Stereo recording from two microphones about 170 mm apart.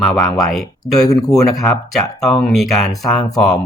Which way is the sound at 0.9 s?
20° left (ahead or behind).